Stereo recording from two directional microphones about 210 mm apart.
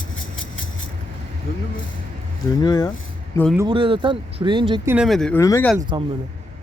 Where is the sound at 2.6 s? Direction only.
20° left (ahead or behind).